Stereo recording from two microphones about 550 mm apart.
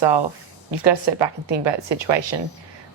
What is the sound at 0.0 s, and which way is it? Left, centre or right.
A woman's voice, right.